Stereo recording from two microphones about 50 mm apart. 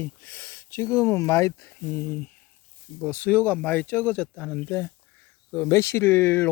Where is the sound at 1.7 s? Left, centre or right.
Left.